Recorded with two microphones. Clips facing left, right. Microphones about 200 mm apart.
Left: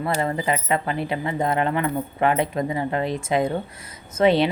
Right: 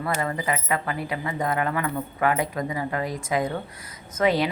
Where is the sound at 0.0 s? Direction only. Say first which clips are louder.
Left 3 dB; 25° left (ahead or behind).